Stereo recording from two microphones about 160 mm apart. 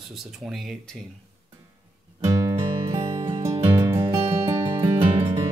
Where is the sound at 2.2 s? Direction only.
20° right (ahead or behind).